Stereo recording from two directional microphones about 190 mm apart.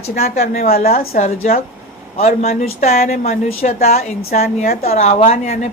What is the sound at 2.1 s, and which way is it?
A woman's voice, 35° left (ahead or behind).